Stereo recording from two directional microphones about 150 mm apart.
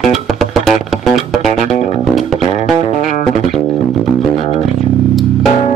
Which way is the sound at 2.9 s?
55° left (ahead or behind).